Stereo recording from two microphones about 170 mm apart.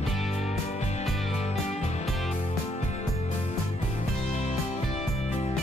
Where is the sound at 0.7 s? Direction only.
40° left (ahead or behind).